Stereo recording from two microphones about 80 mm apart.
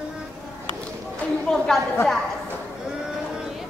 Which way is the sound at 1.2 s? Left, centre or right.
Centre.